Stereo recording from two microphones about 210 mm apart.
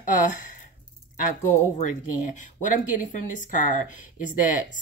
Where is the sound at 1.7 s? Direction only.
35° left (ahead or behind).